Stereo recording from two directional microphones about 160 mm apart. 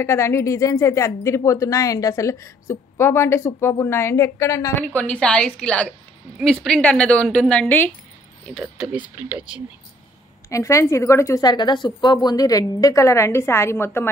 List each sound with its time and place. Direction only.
0.0 s speech: 15° left (ahead or behind)
4.8 s speech: 10° left (ahead or behind)
8.5 s speech: centre (ahead or behind)
10.5 s a woman's voice: 20° left (ahead or behind)